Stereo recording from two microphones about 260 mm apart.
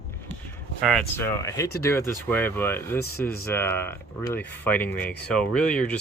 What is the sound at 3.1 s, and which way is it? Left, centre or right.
Speech, left.